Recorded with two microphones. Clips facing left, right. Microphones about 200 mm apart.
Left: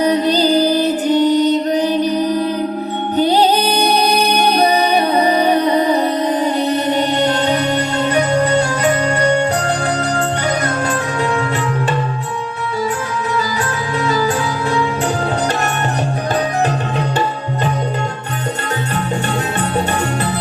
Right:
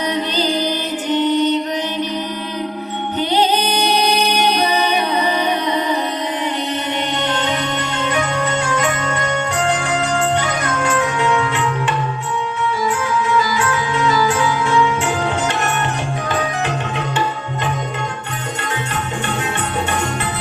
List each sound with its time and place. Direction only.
0.0 s music: 35° left (ahead or behind)
13.3 s music: 35° left (ahead or behind)